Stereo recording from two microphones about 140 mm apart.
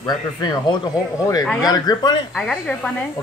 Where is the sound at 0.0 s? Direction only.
30° left (ahead or behind).